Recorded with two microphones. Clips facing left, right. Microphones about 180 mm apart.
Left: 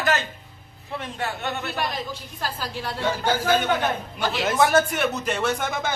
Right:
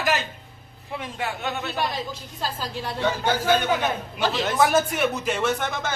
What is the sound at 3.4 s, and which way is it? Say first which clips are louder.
Speech: even; centre (ahead or behind).